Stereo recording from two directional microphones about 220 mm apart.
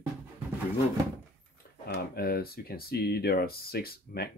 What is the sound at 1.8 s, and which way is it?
Speech, 45° left (ahead or behind).